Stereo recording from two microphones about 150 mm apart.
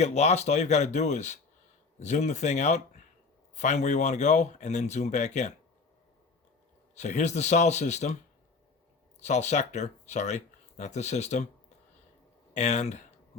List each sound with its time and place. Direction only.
0.0 s speech: 45° left (ahead or behind)
6.9 s speech: 50° left (ahead or behind)
9.2 s speech: 50° left (ahead or behind)
12.5 s speech: 50° left (ahead or behind)